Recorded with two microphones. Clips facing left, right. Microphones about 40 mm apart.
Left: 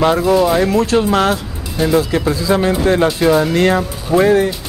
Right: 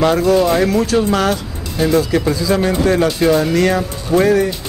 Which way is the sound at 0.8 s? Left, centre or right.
Left.